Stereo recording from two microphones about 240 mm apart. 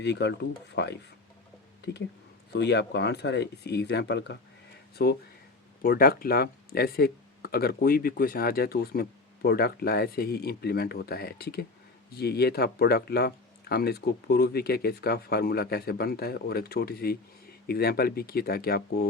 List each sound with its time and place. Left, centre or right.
0.0 s speech: left